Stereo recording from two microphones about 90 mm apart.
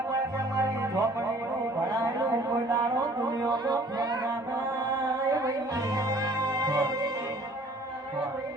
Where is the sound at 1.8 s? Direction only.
35° right (ahead or behind).